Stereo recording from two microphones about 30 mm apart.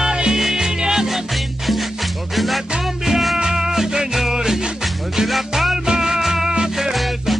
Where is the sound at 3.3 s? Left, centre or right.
Centre.